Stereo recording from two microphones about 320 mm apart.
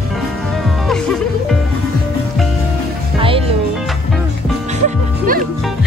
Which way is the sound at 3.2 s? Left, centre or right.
Centre.